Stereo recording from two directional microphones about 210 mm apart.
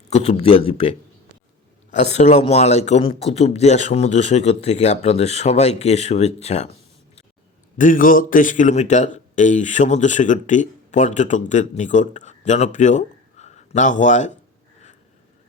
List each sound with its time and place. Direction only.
0.1 s a man's voice: 30° left (ahead or behind)
7.8 s a man's voice: 40° left (ahead or behind)